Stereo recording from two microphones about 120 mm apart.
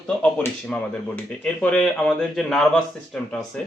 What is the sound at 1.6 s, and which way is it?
Speech, 10° left (ahead or behind).